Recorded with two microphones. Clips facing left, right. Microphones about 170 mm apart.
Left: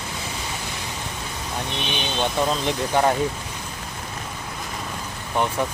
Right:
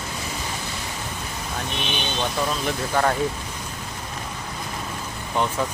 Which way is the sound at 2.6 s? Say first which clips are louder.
Even; 20° left (ahead or behind).